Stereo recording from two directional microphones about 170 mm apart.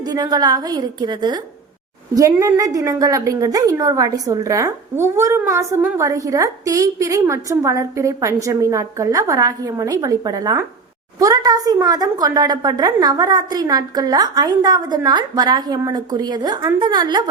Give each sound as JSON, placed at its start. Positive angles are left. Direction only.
{"t": 0.0, "sound": "a woman's voice", "side_deg": -25}